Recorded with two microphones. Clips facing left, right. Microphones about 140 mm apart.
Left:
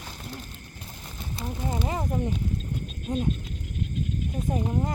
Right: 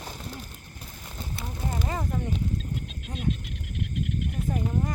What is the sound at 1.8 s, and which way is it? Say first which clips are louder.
Speech: left 1 dB; 25° left (ahead or behind).